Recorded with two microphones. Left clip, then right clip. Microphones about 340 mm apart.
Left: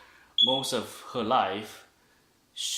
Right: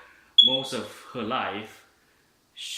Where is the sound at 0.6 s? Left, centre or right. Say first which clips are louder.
Left 1 dB; centre.